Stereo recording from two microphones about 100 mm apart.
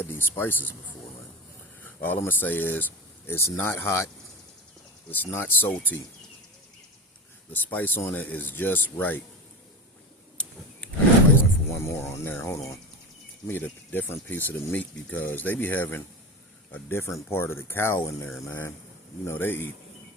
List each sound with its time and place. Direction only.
0.0 s speech: 20° left (ahead or behind)
1.8 s speech: 20° left (ahead or behind)
5.1 s speech: 20° left (ahead or behind)
7.5 s speech: 15° left (ahead or behind)
11.3 s speech: 25° left (ahead or behind)